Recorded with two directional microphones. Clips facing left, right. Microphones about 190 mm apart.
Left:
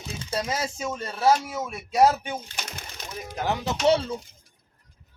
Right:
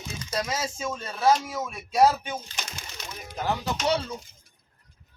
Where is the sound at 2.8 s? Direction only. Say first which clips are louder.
Left 1 dB; 55° left (ahead or behind).